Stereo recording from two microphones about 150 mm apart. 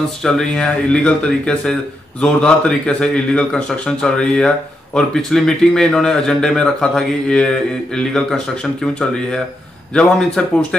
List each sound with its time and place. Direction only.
0.2 s speech: 5° left (ahead or behind)
9.9 s speech: 5° left (ahead or behind)